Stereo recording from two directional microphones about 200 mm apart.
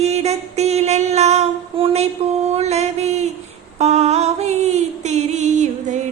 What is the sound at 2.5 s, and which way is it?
Mantra, 35° right (ahead or behind).